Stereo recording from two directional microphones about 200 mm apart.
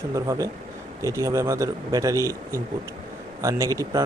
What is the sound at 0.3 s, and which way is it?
Speech, 15° right (ahead or behind).